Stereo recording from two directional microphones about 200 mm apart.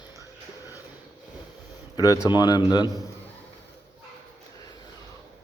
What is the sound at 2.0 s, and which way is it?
A man's voice, 15° left (ahead or behind).